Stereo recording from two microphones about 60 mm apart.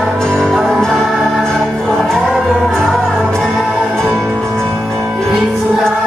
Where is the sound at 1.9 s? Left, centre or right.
Centre.